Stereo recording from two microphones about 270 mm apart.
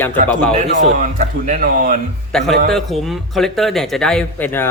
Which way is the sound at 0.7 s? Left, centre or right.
Right.